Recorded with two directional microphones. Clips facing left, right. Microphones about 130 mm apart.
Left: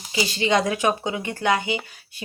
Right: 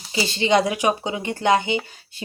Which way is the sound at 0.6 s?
15° right (ahead or behind).